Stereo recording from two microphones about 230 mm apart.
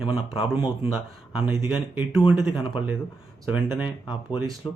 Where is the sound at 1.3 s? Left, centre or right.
Centre.